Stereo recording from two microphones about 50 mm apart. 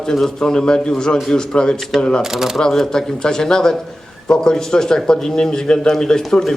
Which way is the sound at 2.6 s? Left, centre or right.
Centre.